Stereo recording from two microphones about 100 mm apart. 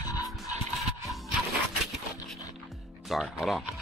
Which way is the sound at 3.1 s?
Centre (ahead or behind).